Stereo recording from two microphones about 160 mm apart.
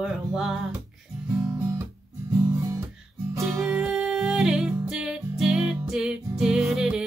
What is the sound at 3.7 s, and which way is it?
Music, 5° right (ahead or behind).